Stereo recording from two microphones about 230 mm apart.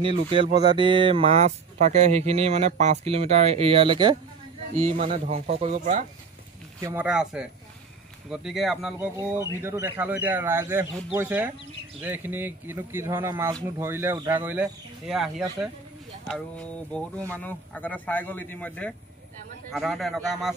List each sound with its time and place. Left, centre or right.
0.0 s speech: right
6.8 s a man's voice: centre